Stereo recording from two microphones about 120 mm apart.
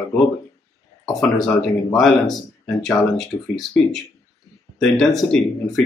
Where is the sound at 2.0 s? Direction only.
5° left (ahead or behind).